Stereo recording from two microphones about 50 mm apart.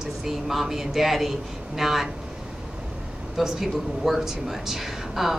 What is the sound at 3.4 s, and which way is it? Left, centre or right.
A man's voice, centre.